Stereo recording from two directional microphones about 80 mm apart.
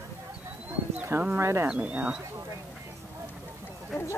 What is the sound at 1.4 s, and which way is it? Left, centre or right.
Speech, right.